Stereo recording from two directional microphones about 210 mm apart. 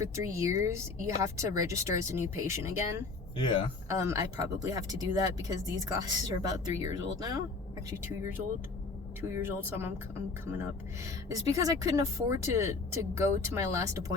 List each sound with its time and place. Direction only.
0.0 s speech: 15° right (ahead or behind)
3.3 s speech: 20° left (ahead or behind)
3.8 s speech: 15° right (ahead or behind)